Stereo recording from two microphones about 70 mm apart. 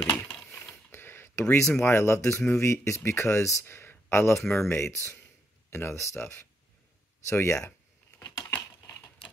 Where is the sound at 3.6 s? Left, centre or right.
Left.